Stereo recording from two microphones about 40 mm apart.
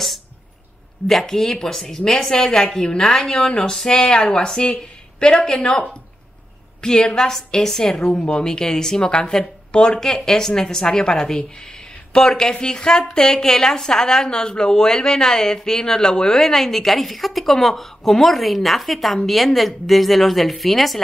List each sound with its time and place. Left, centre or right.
1.0 s a woman's voice: centre